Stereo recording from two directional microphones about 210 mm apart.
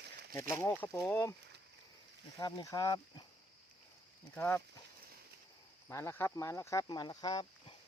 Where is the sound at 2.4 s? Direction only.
20° left (ahead or behind).